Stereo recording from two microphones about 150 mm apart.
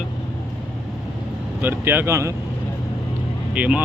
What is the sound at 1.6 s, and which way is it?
Speech, 15° right (ahead or behind).